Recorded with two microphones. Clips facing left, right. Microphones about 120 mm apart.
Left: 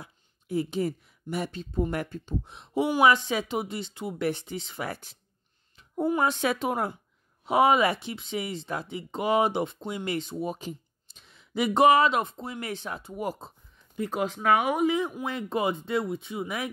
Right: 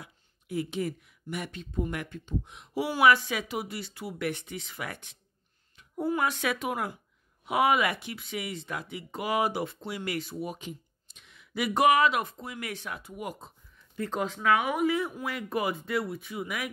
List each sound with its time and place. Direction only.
0.0 s a child's voice: 30° left (ahead or behind)
13.7 s a sound: 15° left (ahead or behind)
14.3 s speech: 35° left (ahead or behind)